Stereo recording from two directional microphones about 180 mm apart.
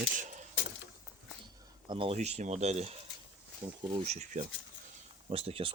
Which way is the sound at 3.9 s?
40° right (ahead or behind).